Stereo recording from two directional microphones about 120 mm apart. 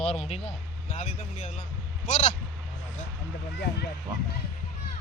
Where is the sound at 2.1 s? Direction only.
70° left (ahead or behind).